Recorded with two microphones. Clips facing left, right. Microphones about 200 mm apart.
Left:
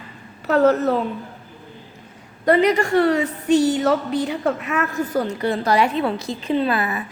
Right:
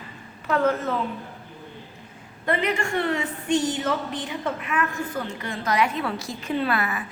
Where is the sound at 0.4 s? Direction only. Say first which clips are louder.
Left 6 dB; 40° left (ahead or behind).